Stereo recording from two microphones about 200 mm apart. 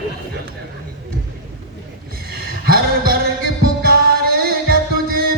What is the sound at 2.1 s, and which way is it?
Music, 50° right (ahead or behind).